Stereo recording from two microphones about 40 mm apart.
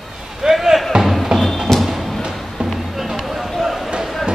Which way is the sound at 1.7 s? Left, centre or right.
Centre.